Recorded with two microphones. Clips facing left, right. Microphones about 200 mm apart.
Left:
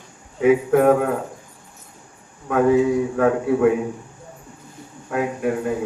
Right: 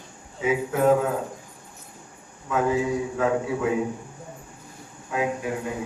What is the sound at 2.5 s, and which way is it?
A man's voice, 60° left (ahead or behind).